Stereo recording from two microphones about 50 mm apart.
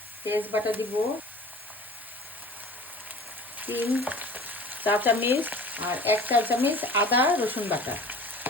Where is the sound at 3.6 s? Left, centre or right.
Right.